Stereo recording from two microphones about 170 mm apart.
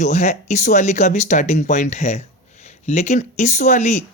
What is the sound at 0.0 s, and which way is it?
Speech, 45° left (ahead or behind).